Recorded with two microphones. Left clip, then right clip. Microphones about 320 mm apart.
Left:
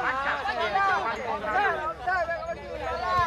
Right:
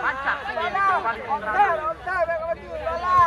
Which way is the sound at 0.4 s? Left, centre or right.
Left.